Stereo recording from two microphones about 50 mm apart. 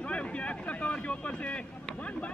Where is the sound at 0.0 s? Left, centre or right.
Left.